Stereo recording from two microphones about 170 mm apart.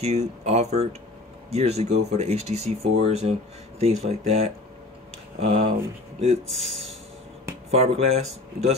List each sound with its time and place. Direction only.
0.0 s speech: 40° right (ahead or behind)